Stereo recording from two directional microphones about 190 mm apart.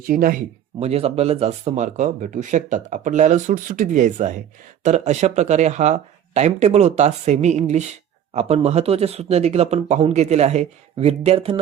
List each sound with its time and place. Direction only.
0.0 s speech: 50° right (ahead or behind)
0.8 s speech: 35° right (ahead or behind)